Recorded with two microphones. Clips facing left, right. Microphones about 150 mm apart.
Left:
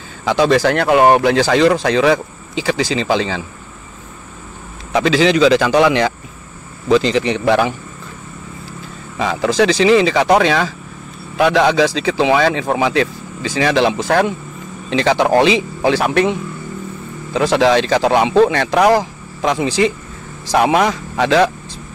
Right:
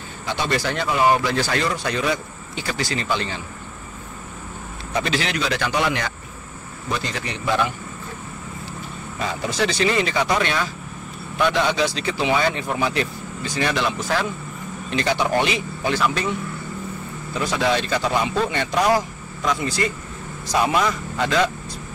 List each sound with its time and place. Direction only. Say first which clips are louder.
0.2 s speech: left 11 dB; 90° left
4.9 s speech: left 10 dB; 90° left
9.2 s speech: left 9 dB; 90° left; by 14.3 s 75° left (ahead or behind)
14.9 s speech: left 8 dB; 90° left
16.0 s speech: left 7 dB; 65° left (ahead or behind)
17.3 s speech: left 9 dB; 90° left
20.5 s speech: left 6 dB; 70° left (ahead or behind)